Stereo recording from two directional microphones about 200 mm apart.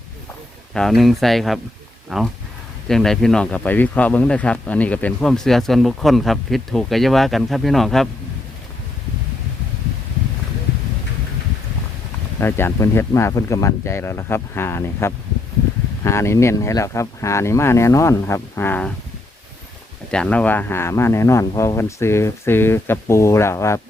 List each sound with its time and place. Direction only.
0.7 s speech: centre (ahead or behind)
12.4 s speech: 10° left (ahead or behind)
20.1 s speech: 5° left (ahead or behind)